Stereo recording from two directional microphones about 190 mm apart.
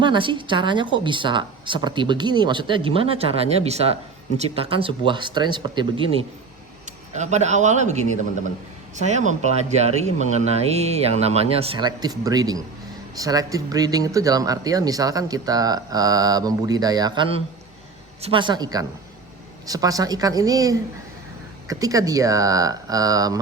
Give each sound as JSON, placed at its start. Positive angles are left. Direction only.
{"t": 0.0, "sound": "speech", "side_deg": -25}
{"t": 9.0, "sound": "speech", "side_deg": -35}